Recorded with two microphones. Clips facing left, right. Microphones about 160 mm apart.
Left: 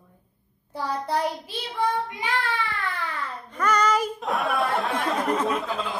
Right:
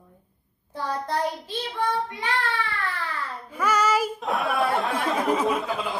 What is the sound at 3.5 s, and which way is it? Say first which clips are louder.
Speech: even; 5° right (ahead or behind).